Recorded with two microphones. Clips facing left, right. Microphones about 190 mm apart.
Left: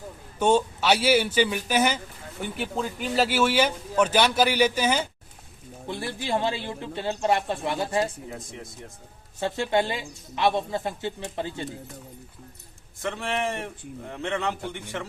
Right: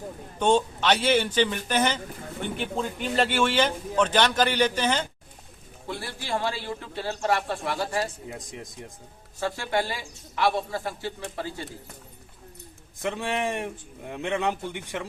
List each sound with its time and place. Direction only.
0.3 s speech: 10° left (ahead or behind)
5.9 s a woman's voice: 20° left (ahead or behind)
9.4 s a woman's voice: 20° left (ahead or behind)
13.0 s a man's voice: 15° right (ahead or behind)